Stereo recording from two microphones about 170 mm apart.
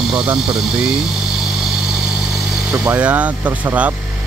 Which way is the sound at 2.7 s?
5° right (ahead or behind).